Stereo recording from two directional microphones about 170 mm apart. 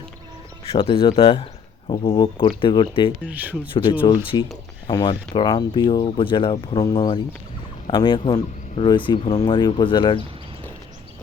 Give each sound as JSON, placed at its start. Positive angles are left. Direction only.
{"t": 0.7, "sound": "speech", "side_deg": 30}
{"t": 3.2, "sound": "speech", "side_deg": -10}
{"t": 4.0, "sound": "speech", "side_deg": 30}